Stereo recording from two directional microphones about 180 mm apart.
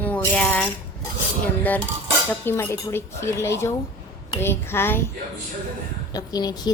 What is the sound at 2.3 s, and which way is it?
Cutlery, 10° left (ahead or behind).